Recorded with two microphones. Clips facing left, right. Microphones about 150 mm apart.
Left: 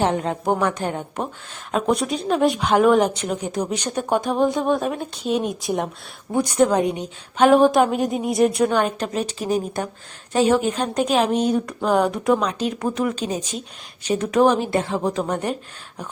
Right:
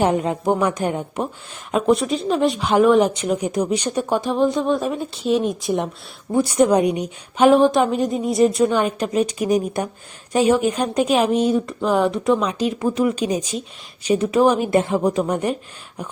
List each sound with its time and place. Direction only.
0.0 s a woman's voice: 10° right (ahead or behind)
3.5 s a woman's voice: 10° right (ahead or behind)
4.1 s a woman's voice: centre (ahead or behind)
7.5 s a woman's voice: centre (ahead or behind)
14.7 s a woman's voice: 20° right (ahead or behind)